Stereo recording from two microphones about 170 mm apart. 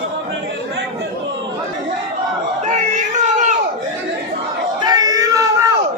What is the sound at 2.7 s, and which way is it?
Speech, 45° right (ahead or behind).